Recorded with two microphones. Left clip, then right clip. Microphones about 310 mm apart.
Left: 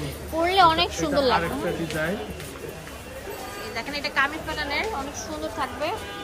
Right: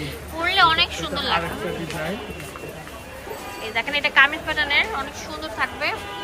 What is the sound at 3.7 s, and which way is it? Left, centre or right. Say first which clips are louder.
A woman's voice: right 8 dB; centre.